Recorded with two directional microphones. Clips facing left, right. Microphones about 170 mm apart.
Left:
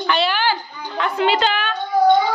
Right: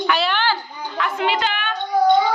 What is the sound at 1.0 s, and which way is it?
Speech, 35° left (ahead or behind).